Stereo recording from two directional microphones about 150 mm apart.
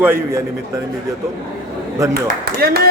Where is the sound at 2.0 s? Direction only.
20° right (ahead or behind).